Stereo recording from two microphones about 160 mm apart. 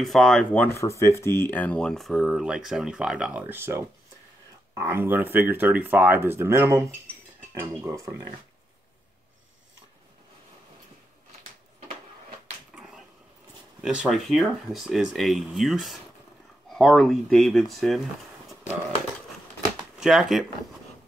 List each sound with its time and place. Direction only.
0.0 s speech: centre (ahead or behind); by 8.2 s 20° right (ahead or behind)
13.7 s speech: 5° right (ahead or behind)
19.8 s speech: 5° right (ahead or behind)